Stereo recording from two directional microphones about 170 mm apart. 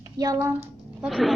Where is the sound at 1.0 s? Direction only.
Centre (ahead or behind).